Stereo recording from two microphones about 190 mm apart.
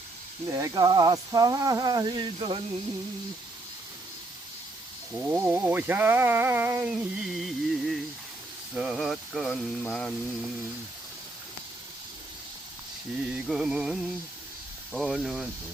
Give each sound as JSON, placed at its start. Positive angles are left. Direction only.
{"t": 0.5, "sound": "speech", "side_deg": -15}
{"t": 5.1, "sound": "a sound", "side_deg": -10}
{"t": 7.0, "sound": "mantra", "side_deg": 0}
{"t": 13.3, "sound": "mantra", "side_deg": -5}